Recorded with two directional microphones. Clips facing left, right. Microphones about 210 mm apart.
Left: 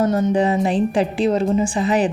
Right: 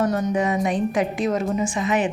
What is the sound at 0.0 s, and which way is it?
Speech, 25° left (ahead or behind).